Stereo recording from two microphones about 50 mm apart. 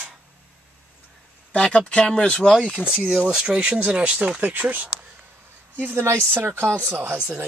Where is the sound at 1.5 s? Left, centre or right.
Left.